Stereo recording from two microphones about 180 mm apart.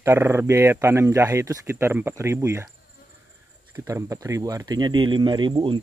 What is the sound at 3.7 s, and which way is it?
Speech, 15° right (ahead or behind).